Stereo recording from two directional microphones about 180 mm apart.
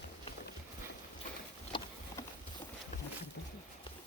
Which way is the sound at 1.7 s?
25° left (ahead or behind).